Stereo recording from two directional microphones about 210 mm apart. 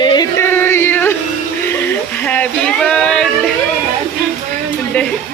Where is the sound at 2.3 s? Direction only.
5° left (ahead or behind).